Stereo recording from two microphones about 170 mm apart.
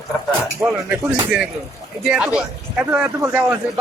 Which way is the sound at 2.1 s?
5° right (ahead or behind).